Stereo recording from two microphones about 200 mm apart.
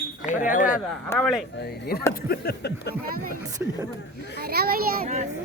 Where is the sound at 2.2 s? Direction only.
55° left (ahead or behind).